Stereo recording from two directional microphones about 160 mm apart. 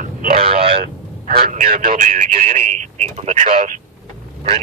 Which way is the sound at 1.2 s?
50° right (ahead or behind).